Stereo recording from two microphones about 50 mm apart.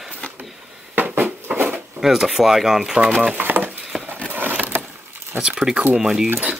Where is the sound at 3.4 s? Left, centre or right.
Right.